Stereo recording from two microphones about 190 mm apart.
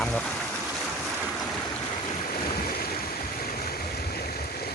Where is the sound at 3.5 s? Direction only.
50° left (ahead or behind).